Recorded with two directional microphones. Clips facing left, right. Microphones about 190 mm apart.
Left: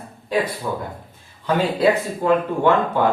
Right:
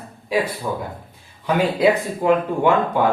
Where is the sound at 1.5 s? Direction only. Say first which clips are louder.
Right 1 dB; 15° right (ahead or behind).